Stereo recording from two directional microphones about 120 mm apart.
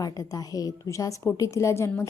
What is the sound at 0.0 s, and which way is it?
A woman's voice, 30° left (ahead or behind).